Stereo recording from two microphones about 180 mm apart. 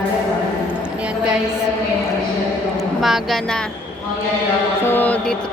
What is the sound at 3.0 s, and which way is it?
Speech, centre (ahead or behind).